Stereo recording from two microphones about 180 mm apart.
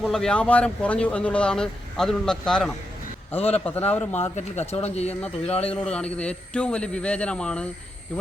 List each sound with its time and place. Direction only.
0.0 s speech: 5° left (ahead or behind)
3.3 s speech: 35° left (ahead or behind)
3.9 s speech: 10° left (ahead or behind)
4.7 s speech: 35° left (ahead or behind)
5.7 s speech: 5° left (ahead or behind)